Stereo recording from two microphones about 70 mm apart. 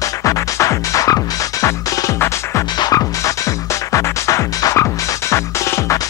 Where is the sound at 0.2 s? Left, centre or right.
Left.